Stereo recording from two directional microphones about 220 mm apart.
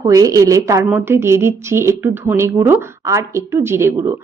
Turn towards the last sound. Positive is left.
turn(degrees=-10)  # may be behind; listen again after turning